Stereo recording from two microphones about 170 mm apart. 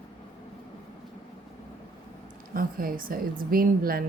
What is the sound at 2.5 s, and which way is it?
A woman's voice, 60° right (ahead or behind).